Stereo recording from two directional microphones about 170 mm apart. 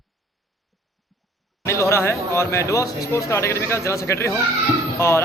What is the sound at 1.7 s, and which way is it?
Speech, 15° left (ahead or behind).